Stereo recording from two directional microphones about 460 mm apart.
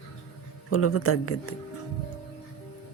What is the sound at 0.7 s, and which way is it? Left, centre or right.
Speech, left.